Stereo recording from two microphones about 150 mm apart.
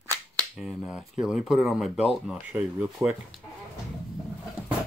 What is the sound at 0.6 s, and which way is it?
Speech, 5° right (ahead or behind).